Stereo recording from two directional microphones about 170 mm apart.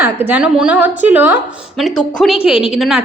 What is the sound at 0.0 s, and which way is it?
A woman's voice, 10° right (ahead or behind).